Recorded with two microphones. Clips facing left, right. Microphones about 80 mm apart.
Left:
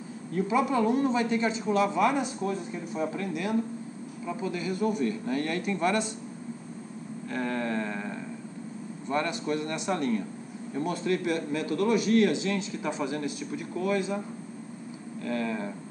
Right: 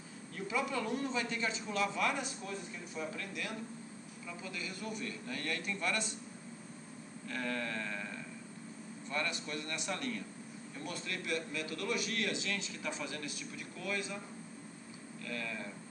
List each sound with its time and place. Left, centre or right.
0.3 s speech: left
7.2 s a sound: left
9.1 s speech: left
10.7 s a man's voice: left
15.2 s speech: left